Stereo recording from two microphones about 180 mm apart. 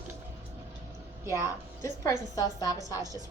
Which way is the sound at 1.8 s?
20° left (ahead or behind).